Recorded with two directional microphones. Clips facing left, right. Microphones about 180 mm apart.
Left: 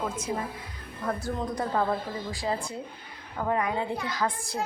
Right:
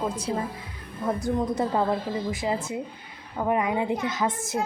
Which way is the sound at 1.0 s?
20° right (ahead or behind).